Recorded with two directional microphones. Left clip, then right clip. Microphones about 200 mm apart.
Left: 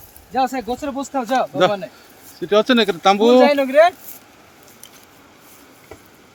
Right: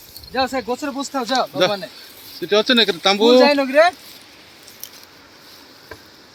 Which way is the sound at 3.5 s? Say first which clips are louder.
Left 1 dB; 45° left (ahead or behind).